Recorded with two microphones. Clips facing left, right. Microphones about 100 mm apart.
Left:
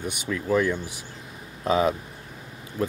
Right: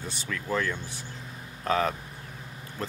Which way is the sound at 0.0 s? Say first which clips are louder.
Left 6 dB; 15° left (ahead or behind).